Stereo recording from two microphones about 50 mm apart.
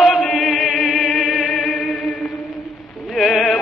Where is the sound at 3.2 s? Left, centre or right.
Left.